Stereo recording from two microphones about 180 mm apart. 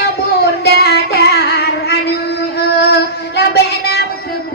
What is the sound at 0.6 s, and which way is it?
Music, 65° left (ahead or behind).